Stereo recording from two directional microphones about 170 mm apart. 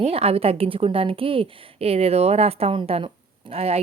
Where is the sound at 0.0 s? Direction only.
35° right (ahead or behind).